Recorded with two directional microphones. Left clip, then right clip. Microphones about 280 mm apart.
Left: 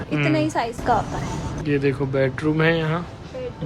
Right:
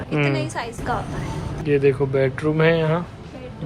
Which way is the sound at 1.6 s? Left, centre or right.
Centre.